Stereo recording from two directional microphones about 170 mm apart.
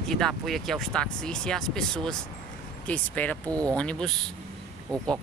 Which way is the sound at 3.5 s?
20° right (ahead or behind).